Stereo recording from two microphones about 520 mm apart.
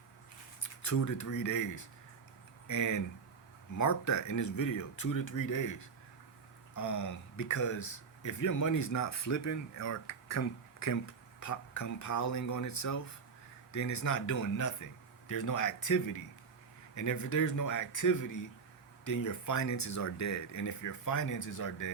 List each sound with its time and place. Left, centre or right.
0.6 s speech: left
6.7 s speech: left